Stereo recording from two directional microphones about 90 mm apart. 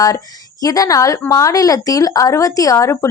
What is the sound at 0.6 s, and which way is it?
Speech, 40° left (ahead or behind).